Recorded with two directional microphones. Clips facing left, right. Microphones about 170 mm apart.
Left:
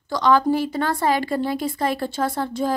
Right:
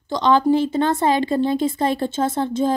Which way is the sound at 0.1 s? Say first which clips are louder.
Right 2 dB; 25° right (ahead or behind).